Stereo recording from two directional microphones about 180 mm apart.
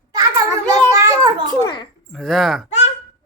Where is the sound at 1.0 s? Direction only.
20° right (ahead or behind).